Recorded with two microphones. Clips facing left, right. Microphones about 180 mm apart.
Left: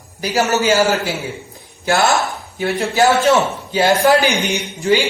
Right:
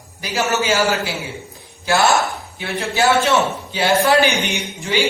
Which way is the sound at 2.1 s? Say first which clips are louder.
Even; 40° left (ahead or behind).